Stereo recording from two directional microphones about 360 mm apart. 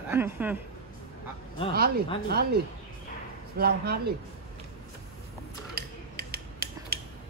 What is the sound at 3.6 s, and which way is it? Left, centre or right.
Speech, right.